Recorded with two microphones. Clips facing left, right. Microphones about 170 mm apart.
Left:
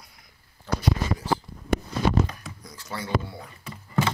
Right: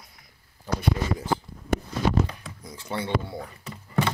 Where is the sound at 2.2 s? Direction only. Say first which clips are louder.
Even; 25° right (ahead or behind).